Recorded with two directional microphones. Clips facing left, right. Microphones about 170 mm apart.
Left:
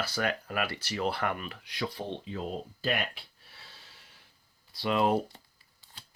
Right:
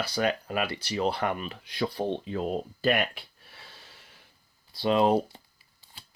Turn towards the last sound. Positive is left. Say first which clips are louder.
# right 3 dB
turn(degrees=-10)  # may be behind; listen again after turning